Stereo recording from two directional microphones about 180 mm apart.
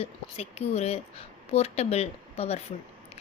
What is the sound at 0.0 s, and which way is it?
Speech, 35° left (ahead or behind).